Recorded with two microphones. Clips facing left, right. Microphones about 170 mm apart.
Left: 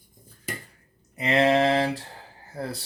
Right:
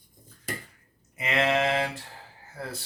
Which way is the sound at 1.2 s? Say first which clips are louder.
Left 5 dB; 35° left (ahead or behind).